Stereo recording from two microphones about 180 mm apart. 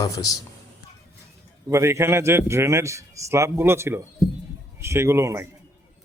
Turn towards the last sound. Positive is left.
turn(degrees=-15)  # may be behind; listen again after turning